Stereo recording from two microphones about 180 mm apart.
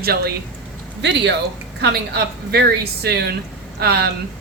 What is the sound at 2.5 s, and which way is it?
Speech, 65° right (ahead or behind).